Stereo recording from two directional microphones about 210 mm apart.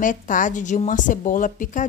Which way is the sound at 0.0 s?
40° left (ahead or behind).